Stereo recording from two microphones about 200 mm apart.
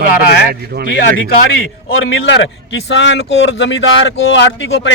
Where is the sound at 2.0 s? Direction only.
70° left (ahead or behind).